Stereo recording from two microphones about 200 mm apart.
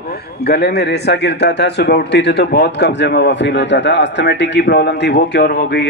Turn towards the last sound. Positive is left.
turn(degrees=55)  # may be behind; listen again after turning